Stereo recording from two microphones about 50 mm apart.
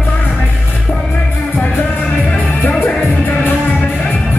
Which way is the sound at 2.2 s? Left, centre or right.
Left.